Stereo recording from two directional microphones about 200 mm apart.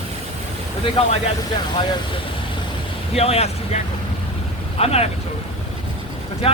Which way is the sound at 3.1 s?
30° left (ahead or behind).